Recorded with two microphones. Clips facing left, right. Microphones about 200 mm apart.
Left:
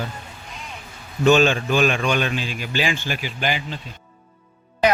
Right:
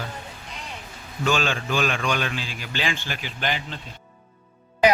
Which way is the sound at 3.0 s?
10° left (ahead or behind).